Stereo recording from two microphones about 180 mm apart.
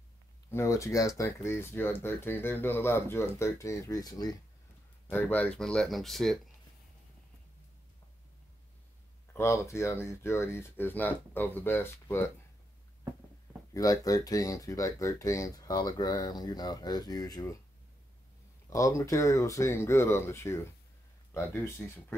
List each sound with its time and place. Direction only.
0.5 s speech: 15° left (ahead or behind)
5.1 s speech: 10° left (ahead or behind)
9.3 s speech: 15° left (ahead or behind)
13.7 s speech: 20° left (ahead or behind)
18.7 s speech: 15° left (ahead or behind)